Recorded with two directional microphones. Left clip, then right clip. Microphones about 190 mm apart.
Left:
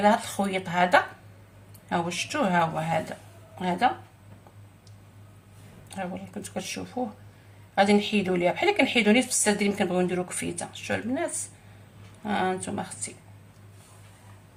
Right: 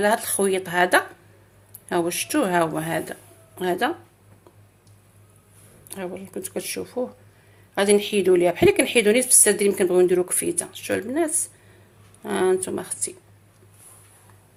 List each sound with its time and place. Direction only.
0.0 s a woman's voice: 50° right (ahead or behind)
5.9 s a woman's voice: 45° right (ahead or behind)